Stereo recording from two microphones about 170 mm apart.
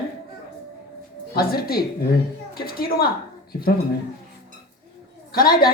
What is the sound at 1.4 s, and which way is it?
A woman's voice, 65° left (ahead or behind).